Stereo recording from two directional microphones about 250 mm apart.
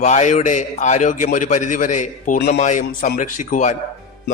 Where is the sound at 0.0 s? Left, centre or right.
Left.